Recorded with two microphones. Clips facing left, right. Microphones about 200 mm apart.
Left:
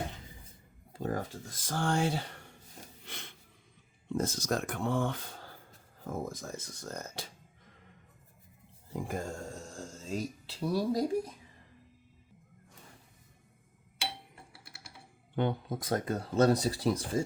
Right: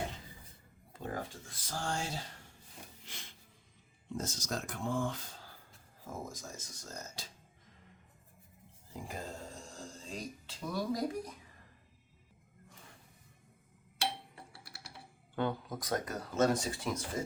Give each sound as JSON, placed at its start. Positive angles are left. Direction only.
{"t": 0.9, "sound": "speech", "side_deg": 40}
{"t": 3.0, "sound": "a sound", "side_deg": 60}
{"t": 4.1, "sound": "speech", "side_deg": 55}
{"t": 8.9, "sound": "speech", "side_deg": 55}
{"t": 15.4, "sound": "speech", "side_deg": 25}